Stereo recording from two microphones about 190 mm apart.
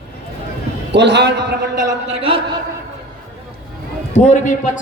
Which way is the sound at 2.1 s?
30° right (ahead or behind).